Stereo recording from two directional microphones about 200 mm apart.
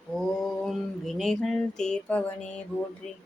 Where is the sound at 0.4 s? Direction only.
Centre (ahead or behind).